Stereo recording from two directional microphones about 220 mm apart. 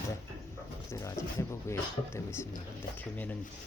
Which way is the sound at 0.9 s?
15° left (ahead or behind).